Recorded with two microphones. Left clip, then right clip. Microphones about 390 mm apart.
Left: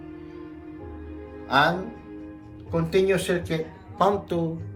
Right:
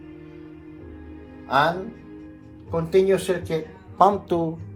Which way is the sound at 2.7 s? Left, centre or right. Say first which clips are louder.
Right 3 dB; centre.